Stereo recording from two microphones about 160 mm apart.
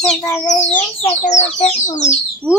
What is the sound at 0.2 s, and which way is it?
Speech, 20° left (ahead or behind).